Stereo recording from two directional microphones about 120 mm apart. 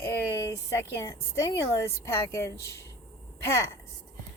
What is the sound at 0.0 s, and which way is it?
A woman's voice, 25° left (ahead or behind).